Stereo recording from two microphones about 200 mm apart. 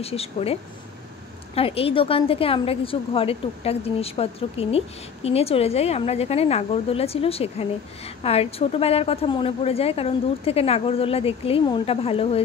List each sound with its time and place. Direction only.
0.0 s a woman's voice: 30° left (ahead or behind)